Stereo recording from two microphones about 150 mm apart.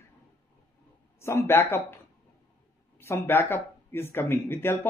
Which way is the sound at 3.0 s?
15° left (ahead or behind).